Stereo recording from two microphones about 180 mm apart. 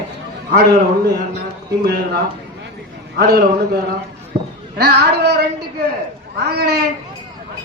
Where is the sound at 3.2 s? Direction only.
60° right (ahead or behind).